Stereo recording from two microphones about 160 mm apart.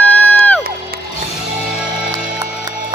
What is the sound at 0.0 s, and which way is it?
Music, 10° left (ahead or behind).